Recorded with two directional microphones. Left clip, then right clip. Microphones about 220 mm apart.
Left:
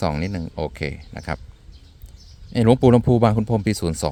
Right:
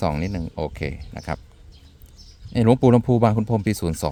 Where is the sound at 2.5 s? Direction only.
5° left (ahead or behind).